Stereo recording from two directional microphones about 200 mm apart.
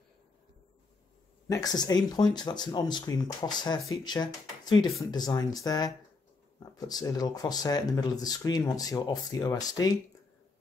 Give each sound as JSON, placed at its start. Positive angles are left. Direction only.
{"t": 1.5, "sound": "speech", "side_deg": 20}